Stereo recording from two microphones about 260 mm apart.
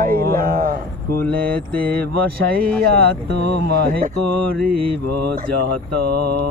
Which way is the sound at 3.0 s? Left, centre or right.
Right.